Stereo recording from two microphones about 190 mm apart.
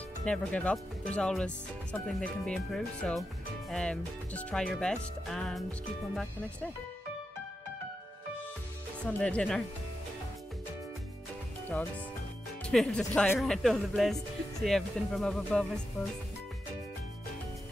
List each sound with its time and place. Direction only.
0.2 s speech: 5° left (ahead or behind)
9.0 s speech: 5° left (ahead or behind)
12.6 s speech: 5° left (ahead or behind)